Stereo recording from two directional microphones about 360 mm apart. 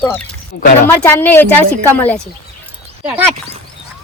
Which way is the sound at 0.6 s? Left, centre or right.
Left.